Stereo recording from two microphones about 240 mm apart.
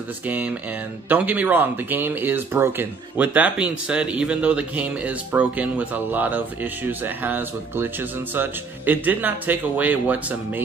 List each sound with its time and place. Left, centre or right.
0.3 s speech: centre